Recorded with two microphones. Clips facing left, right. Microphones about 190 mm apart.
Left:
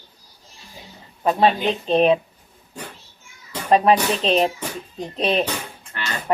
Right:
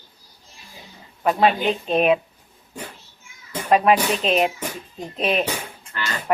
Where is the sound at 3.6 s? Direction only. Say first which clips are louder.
Left 1 dB; 30° left (ahead or behind).